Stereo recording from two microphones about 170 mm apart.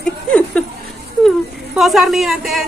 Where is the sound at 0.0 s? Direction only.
5° left (ahead or behind).